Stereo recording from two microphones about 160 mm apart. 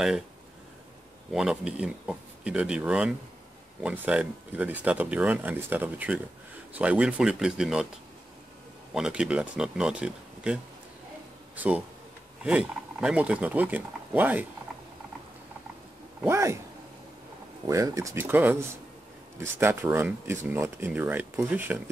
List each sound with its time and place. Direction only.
1.3 s speech: 5° right (ahead or behind)
8.9 s speech: 5° right (ahead or behind)
16.3 s speech: 15° right (ahead or behind)
17.6 s speech: 20° right (ahead or behind)